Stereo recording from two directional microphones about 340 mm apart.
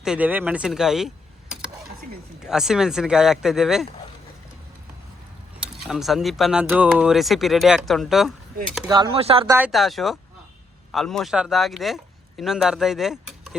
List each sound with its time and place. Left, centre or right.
0.0 s speech: centre
5.8 s speech: centre
8.9 s speech: centre
9.6 s speech: centre